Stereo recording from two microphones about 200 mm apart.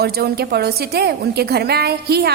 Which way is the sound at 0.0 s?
50° right (ahead or behind).